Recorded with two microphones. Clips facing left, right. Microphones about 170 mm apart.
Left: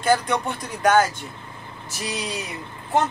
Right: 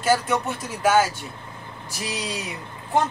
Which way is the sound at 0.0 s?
5° right (ahead or behind).